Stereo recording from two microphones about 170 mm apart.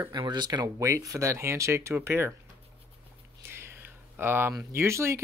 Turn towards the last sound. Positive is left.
turn(degrees=-15)  # may be behind; listen again after turning